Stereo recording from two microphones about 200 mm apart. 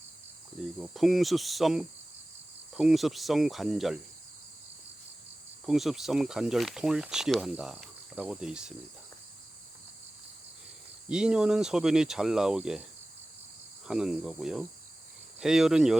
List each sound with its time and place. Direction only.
0.8 s speech: centre (ahead or behind)
5.6 s speech: centre (ahead or behind)
11.1 s speech: 5° right (ahead or behind)
13.8 s speech: 5° right (ahead or behind)